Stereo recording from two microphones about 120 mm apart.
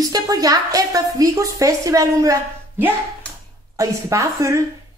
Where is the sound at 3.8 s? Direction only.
25° right (ahead or behind).